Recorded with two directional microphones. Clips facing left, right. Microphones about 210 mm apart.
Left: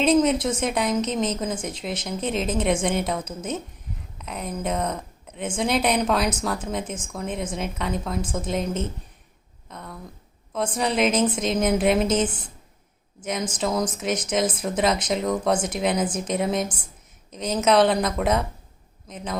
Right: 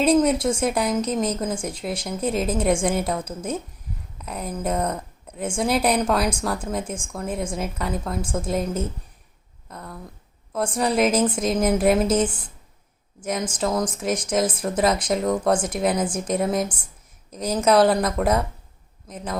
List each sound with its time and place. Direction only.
0.0 s a woman's voice: 10° right (ahead or behind)
9.6 s a sound: 5° right (ahead or behind)
10.7 s a woman's voice: centre (ahead or behind)